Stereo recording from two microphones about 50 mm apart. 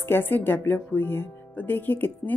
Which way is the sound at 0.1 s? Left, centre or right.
Left.